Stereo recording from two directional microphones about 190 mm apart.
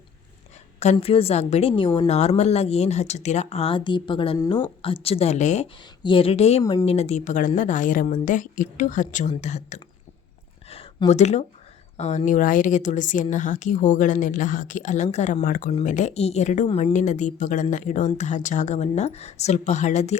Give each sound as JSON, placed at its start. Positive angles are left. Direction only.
{"t": 0.8, "sound": "a woman's voice", "side_deg": 35}
{"t": 6.0, "sound": "speech", "side_deg": 25}
{"t": 6.6, "sound": "a woman's voice", "side_deg": 20}
{"t": 11.1, "sound": "a woman's voice", "side_deg": 35}